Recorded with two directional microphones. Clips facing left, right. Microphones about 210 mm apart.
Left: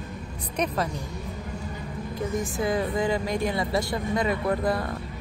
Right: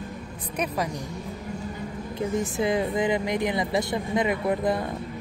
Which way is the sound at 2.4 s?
20° right (ahead or behind).